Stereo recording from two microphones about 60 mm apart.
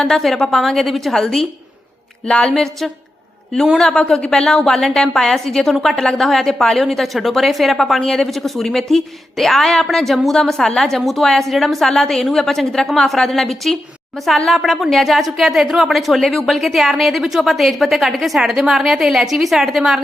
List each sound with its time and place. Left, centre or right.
0.0 s a woman's voice: centre
2.5 s a woman's voice: centre